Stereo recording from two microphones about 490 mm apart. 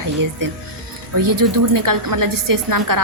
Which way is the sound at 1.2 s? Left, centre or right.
Right.